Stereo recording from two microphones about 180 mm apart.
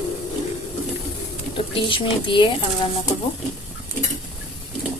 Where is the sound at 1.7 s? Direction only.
30° left (ahead or behind).